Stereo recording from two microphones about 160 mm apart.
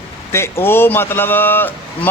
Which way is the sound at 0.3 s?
15° left (ahead or behind).